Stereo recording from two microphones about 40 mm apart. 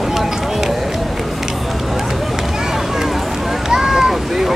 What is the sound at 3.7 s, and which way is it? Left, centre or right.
Boat, centre.